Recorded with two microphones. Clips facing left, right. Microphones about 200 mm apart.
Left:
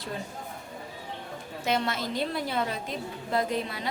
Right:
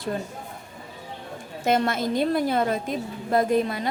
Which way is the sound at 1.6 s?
50° right (ahead or behind).